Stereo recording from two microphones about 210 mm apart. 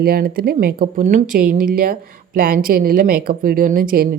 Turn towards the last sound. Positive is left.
turn(degrees=-40)  # may be behind; listen again after turning